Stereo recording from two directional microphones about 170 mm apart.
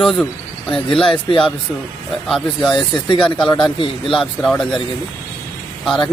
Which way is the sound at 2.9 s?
30° left (ahead or behind).